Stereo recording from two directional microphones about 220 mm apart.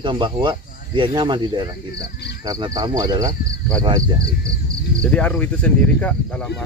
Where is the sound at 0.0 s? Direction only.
20° right (ahead or behind).